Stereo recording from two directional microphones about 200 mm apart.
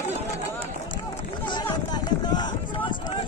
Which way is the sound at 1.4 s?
20° left (ahead or behind).